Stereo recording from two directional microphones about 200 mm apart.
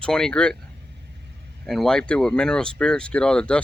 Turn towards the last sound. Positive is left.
turn(degrees=5)  # may be behind; listen again after turning